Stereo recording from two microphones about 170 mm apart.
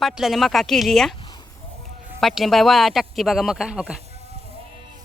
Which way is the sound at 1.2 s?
25° left (ahead or behind).